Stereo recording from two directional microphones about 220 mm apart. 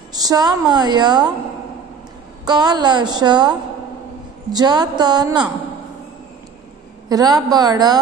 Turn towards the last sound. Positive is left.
turn(degrees=-20)  # may be behind; listen again after turning